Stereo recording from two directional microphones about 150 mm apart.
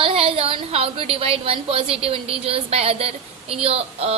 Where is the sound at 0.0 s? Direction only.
35° right (ahead or behind).